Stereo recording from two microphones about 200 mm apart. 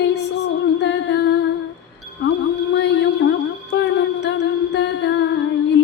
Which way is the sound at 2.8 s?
60° left (ahead or behind).